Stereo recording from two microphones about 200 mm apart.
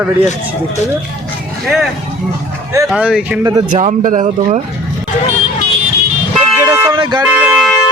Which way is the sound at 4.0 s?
40° right (ahead or behind).